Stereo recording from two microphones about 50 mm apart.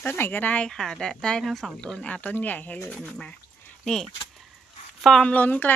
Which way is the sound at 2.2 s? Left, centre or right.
Left.